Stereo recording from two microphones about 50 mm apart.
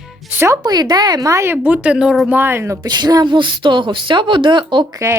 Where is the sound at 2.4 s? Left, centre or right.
Right.